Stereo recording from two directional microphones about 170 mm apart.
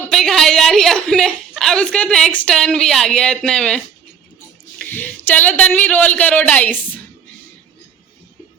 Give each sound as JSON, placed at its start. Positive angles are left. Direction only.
{"t": 0.1, "sound": "a woman's voice", "side_deg": 0}
{"t": 4.8, "sound": "speech", "side_deg": 10}